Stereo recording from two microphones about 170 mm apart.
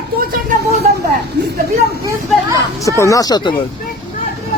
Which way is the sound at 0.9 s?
45° right (ahead or behind).